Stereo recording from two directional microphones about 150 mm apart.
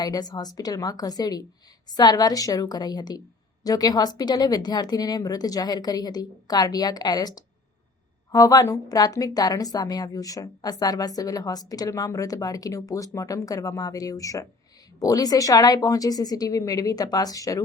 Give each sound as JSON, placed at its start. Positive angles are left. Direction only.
{"t": 0.0, "sound": "a woman's voice", "side_deg": 25}